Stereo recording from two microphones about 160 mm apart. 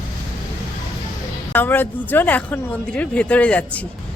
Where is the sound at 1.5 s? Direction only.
10° left (ahead or behind).